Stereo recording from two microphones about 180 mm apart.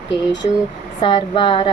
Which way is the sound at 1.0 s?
30° left (ahead or behind).